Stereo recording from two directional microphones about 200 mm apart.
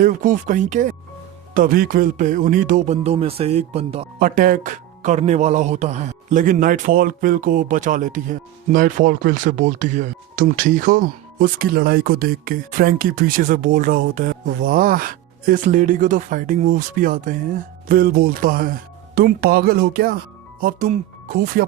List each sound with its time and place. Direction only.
0.0 s speech: 40° right (ahead or behind)
4.2 s speech: 45° right (ahead or behind)